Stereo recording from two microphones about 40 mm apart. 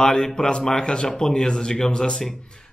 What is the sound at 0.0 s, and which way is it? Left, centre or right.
A man's voice, centre.